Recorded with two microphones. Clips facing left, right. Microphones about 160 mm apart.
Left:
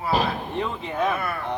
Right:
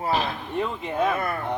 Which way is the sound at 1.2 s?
40° right (ahead or behind).